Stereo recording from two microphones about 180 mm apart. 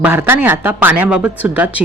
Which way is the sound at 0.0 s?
10° right (ahead or behind).